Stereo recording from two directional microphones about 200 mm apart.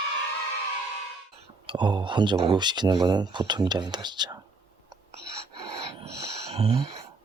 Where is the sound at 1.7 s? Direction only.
20° right (ahead or behind).